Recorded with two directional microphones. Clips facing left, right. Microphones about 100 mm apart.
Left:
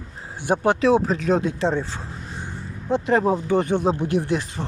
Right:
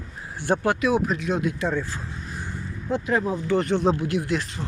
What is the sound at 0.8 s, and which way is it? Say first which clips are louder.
Speech: left 4 dB; 30° left (ahead or behind).